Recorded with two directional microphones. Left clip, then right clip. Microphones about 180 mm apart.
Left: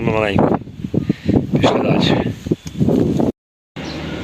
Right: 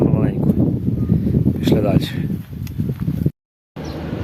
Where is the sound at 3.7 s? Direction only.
Centre (ahead or behind).